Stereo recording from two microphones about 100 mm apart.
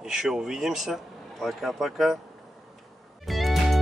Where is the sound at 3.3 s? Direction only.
Centre (ahead or behind).